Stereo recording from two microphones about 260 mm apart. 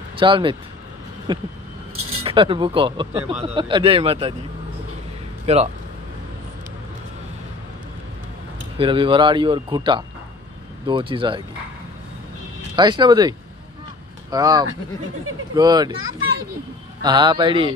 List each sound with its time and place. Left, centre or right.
0.2 s speech: centre
5.5 s speech: right
8.7 s speech: centre
12.7 s speech: centre
14.3 s speech: centre
17.0 s speech: centre